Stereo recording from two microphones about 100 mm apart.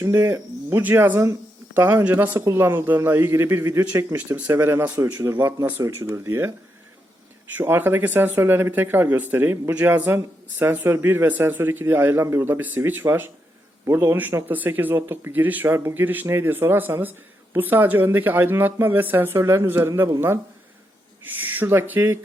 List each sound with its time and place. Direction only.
0.0 s speech: 25° right (ahead or behind)
2.4 s speech: 25° right (ahead or behind)
4.4 s speech: 20° right (ahead or behind)
7.5 s speech: 20° right (ahead or behind)
21.2 s speech: 20° right (ahead or behind)